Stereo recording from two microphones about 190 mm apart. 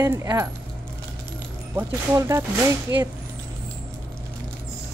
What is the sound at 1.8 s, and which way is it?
Speech, 15° right (ahead or behind).